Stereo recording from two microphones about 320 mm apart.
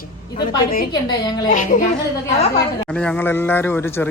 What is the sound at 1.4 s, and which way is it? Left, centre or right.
Speech, left.